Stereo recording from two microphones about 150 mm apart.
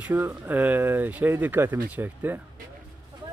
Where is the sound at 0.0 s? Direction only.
15° right (ahead or behind).